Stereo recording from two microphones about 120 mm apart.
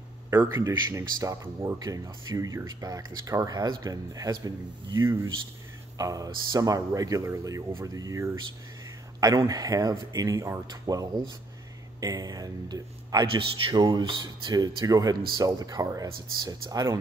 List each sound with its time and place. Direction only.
0.3 s speech: 20° right (ahead or behind)